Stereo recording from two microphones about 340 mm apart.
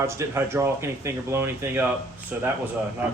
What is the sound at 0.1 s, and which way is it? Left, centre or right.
Speech, centre.